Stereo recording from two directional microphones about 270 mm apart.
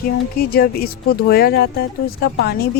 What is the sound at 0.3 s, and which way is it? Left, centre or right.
Speech, left.